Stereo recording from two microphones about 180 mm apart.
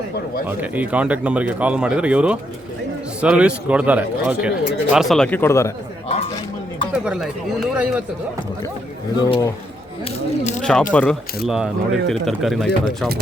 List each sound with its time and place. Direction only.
0.4 s speech: 10° right (ahead or behind); by 5.7 s 15° left (ahead or behind)
6.9 s speech: 5° right (ahead or behind)
9.2 s speech: 20° left (ahead or behind)
10.0 s speech: 40° left (ahead or behind)
10.6 s speech: 5° left (ahead or behind)